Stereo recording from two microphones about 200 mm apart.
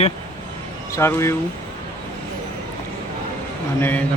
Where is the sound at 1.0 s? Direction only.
15° left (ahead or behind).